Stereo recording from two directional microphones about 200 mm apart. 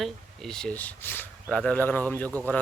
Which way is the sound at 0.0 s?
Centre (ahead or behind).